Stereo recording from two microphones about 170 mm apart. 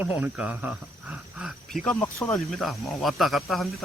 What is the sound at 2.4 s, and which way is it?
Speech, centre (ahead or behind).